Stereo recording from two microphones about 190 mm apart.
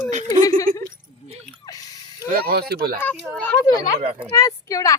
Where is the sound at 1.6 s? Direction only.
20° left (ahead or behind).